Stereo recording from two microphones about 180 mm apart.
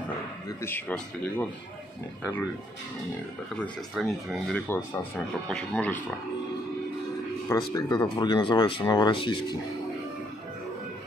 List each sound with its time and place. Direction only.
0.5 s speech: 15° left (ahead or behind)
3.5 s speech: 5° left (ahead or behind)
4.6 s speech: 15° left (ahead or behind)
7.4 s speech: 20° left (ahead or behind)